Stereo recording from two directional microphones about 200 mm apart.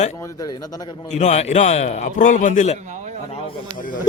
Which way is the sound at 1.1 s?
35° left (ahead or behind).